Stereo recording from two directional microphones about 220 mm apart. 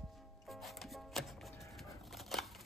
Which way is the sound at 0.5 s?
Centre (ahead or behind).